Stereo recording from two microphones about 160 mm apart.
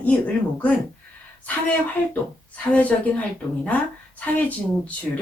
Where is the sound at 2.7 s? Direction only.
10° left (ahead or behind).